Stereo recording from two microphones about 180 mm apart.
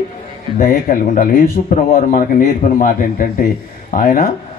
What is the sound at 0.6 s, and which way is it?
A man's voice, 50° left (ahead or behind).